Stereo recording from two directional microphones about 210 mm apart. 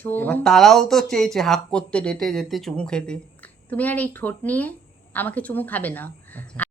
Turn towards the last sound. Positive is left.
turn(degrees=5)  # may be behind; listen again after turning